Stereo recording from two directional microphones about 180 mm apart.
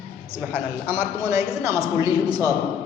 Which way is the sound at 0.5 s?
15° right (ahead or behind).